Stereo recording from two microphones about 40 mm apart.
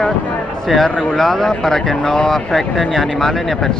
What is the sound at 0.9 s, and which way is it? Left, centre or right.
Speech, left.